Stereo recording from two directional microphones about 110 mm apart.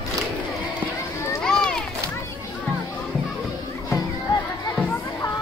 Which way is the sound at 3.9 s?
25° left (ahead or behind).